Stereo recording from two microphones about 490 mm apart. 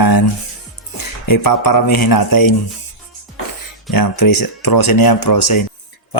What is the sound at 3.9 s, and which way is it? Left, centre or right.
Mantra, left.